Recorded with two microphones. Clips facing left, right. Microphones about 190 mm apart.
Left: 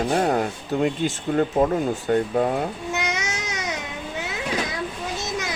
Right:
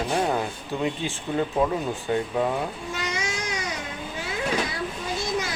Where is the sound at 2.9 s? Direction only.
85° left.